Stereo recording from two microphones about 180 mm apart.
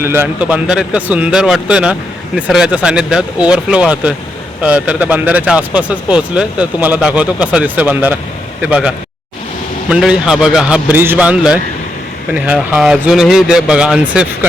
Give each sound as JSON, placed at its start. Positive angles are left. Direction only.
{"t": 0.0, "sound": "speech", "side_deg": -10}
{"t": 9.9, "sound": "speech", "side_deg": -5}